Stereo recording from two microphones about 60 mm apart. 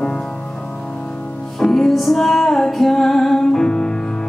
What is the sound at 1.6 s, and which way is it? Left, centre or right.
Music, centre.